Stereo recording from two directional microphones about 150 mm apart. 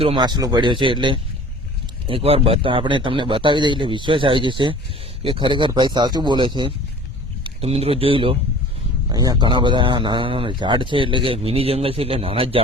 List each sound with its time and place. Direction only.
0.0 s speech: 35° right (ahead or behind)
9.1 s speech: 25° right (ahead or behind)